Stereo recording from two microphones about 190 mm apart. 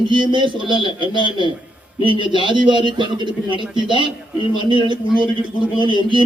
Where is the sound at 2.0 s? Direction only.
25° right (ahead or behind).